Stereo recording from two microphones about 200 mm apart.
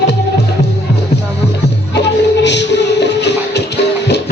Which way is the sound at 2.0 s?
60° left (ahead or behind).